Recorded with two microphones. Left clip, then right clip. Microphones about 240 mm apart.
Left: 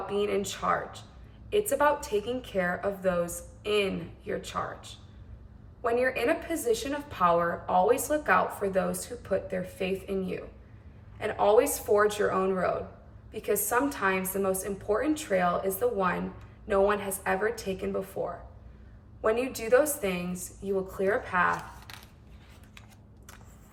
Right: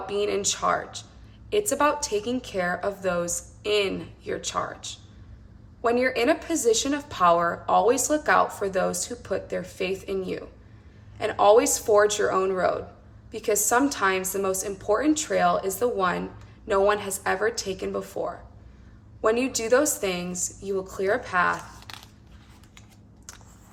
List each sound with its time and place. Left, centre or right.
0.0 s a woman's voice: centre
5.8 s a woman's voice: centre
19.2 s a woman's voice: right